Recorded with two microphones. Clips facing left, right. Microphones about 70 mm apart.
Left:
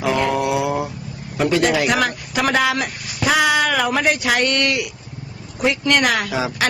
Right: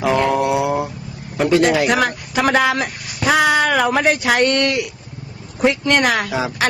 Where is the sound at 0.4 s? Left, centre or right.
Right.